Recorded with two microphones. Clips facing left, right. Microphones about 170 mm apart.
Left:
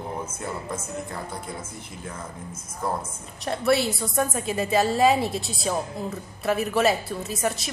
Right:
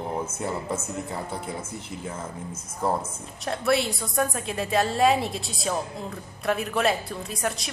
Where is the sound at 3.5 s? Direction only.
Centre (ahead or behind).